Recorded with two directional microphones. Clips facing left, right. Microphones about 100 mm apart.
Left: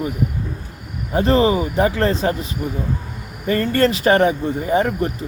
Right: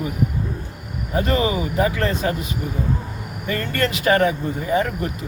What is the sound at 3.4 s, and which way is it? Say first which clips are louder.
Speech: left 6 dB; 35° left (ahead or behind).